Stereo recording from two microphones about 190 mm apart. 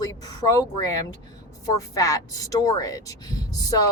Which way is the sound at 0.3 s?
20° left (ahead or behind).